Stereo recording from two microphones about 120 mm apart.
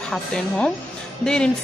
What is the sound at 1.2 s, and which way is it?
Speech, 5° left (ahead or behind).